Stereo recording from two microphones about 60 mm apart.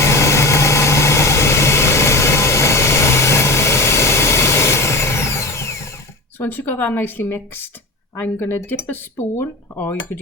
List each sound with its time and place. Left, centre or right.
0.0 s vehicle: left
6.4 s speech: left